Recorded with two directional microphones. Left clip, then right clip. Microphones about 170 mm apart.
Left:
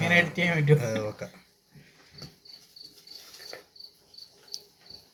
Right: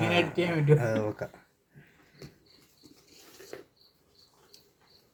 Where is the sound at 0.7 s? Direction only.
50° right (ahead or behind).